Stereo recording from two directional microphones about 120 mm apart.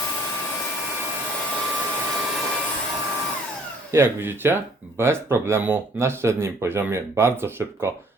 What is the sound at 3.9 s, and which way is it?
Speech, 20° right (ahead or behind).